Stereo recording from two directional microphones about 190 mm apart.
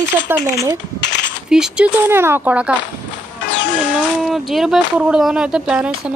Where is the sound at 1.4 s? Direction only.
5° right (ahead or behind).